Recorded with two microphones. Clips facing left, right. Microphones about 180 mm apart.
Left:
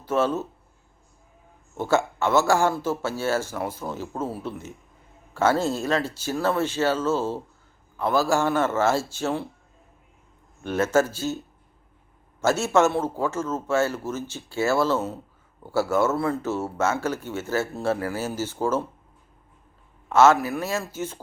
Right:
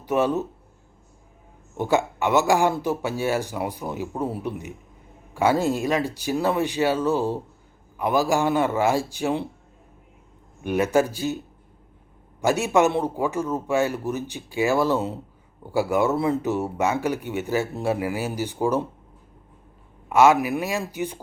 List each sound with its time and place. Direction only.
0.0 s speech: 15° right (ahead or behind)
1.7 s speech: 15° right (ahead or behind)
10.6 s speech: 15° right (ahead or behind)
12.4 s speech: 15° right (ahead or behind)
20.1 s speech: 15° right (ahead or behind)